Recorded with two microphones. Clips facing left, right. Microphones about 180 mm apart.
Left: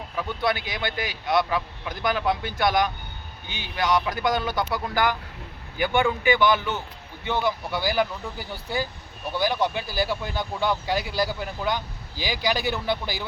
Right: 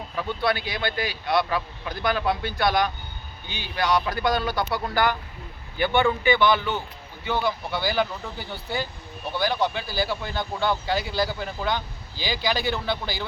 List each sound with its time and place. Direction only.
0.2 s speech: 15° left (ahead or behind)